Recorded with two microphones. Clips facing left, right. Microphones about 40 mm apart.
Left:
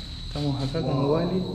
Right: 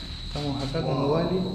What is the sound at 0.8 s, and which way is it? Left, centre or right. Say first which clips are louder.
Speech: left 1 dB; right.